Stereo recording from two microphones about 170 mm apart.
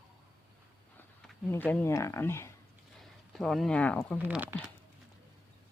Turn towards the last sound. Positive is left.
turn(degrees=-10)  # may be behind; listen again after turning